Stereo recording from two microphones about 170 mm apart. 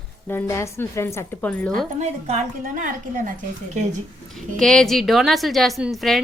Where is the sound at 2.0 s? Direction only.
40° right (ahead or behind).